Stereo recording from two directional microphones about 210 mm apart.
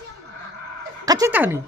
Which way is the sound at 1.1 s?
15° right (ahead or behind).